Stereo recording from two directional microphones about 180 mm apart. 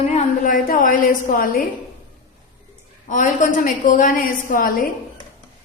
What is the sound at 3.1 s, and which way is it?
A woman's voice, 45° left (ahead or behind).